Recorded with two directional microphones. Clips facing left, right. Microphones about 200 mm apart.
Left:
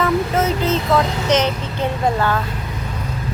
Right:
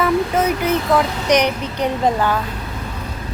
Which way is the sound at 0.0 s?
10° right (ahead or behind).